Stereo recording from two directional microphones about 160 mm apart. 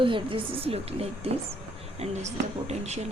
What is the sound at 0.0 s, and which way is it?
Speech, 30° right (ahead or behind).